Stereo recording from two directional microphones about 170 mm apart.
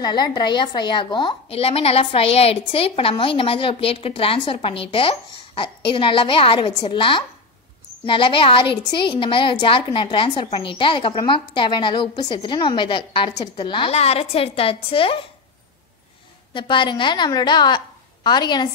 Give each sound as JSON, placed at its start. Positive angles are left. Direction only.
{"t": 0.0, "sound": "a woman's voice", "side_deg": 25}
{"t": 16.5, "sound": "a woman's voice", "side_deg": 30}